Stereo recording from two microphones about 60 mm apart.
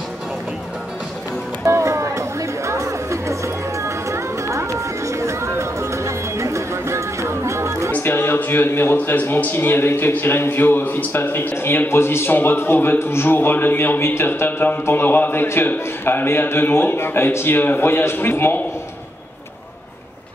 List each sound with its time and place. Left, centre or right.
1.7 s chatter: right
7.9 s a man's voice: left